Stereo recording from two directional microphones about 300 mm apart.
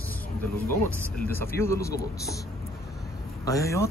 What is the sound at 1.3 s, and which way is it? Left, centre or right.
Speech, centre.